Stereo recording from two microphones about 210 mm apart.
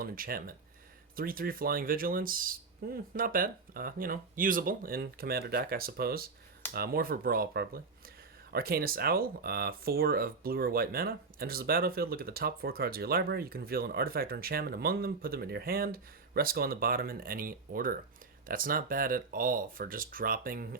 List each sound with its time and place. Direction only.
0.0 s speech: 45° right (ahead or behind)